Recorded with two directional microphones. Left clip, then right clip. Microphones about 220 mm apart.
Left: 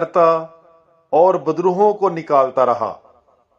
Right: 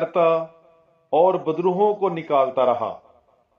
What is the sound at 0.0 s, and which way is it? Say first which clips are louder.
Speech: left 4 dB; 50° left (ahead or behind).